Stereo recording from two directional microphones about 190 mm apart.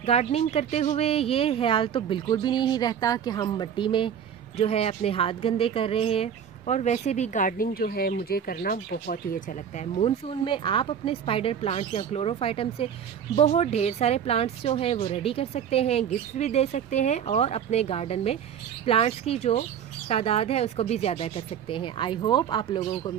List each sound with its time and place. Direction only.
0.0 s speech: 35° left (ahead or behind)